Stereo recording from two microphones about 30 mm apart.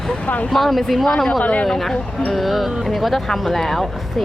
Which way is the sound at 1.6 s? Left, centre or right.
Centre.